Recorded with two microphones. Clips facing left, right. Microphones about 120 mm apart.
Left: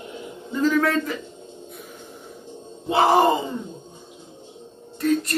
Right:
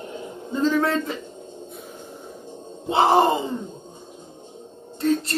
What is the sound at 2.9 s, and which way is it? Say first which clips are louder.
Speech: even; 25° right (ahead or behind).